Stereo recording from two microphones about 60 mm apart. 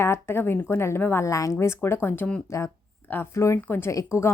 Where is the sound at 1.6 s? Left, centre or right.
Left.